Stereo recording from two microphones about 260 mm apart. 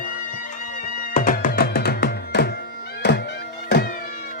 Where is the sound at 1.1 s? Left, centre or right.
Left.